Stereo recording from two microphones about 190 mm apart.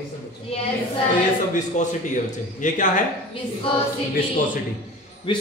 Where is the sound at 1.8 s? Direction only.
40° left (ahead or behind).